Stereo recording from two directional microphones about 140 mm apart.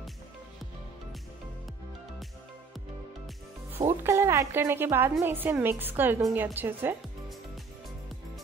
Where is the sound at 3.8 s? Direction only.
20° right (ahead or behind).